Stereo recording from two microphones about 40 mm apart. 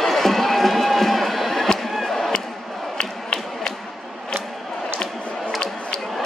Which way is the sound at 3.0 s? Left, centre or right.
Centre.